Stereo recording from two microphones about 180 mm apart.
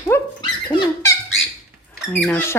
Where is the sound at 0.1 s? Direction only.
15° left (ahead or behind).